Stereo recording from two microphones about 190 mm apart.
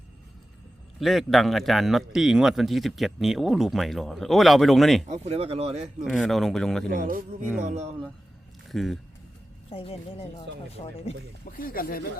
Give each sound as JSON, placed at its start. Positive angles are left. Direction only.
{"t": 0.9, "sound": "a man's voice", "side_deg": 0}
{"t": 5.0, "sound": "speech", "side_deg": -35}
{"t": 6.1, "sound": "a man's voice", "side_deg": 0}
{"t": 6.8, "sound": "speech", "side_deg": -45}
{"t": 8.7, "sound": "speech", "side_deg": 0}
{"t": 9.6, "sound": "speech", "side_deg": 30}
{"t": 11.4, "sound": "speech", "side_deg": 50}